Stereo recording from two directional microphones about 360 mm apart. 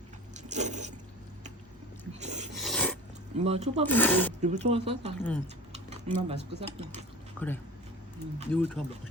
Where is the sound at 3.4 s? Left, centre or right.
Centre.